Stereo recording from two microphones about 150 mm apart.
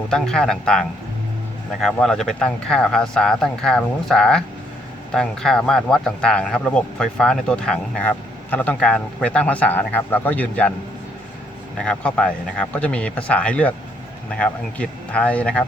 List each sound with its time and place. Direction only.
0.1 s speech: 5° left (ahead or behind)
11.9 s speech: 10° left (ahead or behind)